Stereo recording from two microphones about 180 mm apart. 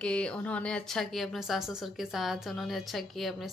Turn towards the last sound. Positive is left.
turn(degrees=0)  # may be behind; listen again after turning